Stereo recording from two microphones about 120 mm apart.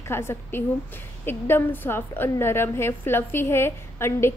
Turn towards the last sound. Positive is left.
turn(degrees=20)  # may be behind; listen again after turning